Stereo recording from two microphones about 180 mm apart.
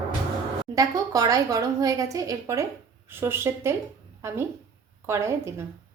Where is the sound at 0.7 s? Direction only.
20° right (ahead or behind).